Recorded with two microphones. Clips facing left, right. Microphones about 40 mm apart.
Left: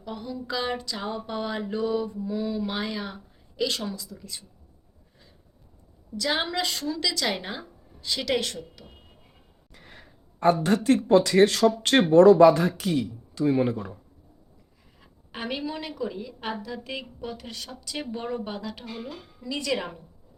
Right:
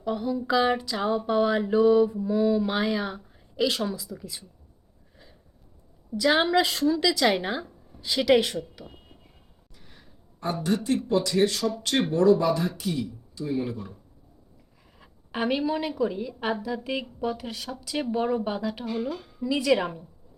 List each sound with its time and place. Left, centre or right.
0.0 s a woman's voice: centre
6.1 s speech: centre
9.7 s a sound: left
10.8 s speech: left
13.7 s speech: left
15.0 s a woman's voice: centre
19.5 s speech: centre